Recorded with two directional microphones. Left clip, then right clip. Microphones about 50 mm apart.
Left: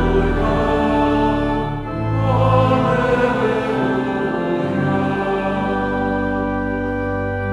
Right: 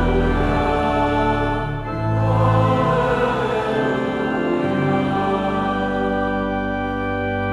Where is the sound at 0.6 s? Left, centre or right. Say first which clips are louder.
Left 2 dB; right.